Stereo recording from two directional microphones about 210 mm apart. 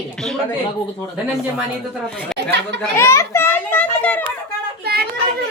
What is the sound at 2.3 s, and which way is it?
Speech, 55° right (ahead or behind).